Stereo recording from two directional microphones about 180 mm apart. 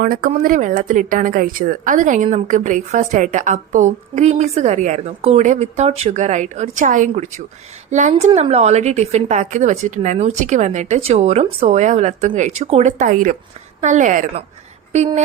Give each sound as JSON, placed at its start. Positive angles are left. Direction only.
{"t": 0.0, "sound": "a woman's voice", "side_deg": -50}